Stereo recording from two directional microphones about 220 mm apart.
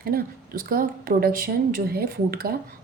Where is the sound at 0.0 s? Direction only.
40° right (ahead or behind).